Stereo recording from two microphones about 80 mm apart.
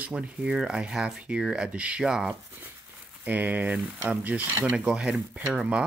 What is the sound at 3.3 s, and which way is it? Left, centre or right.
Speech, right.